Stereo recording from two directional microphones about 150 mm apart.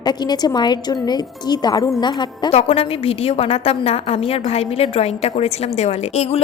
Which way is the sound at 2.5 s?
45° left (ahead or behind).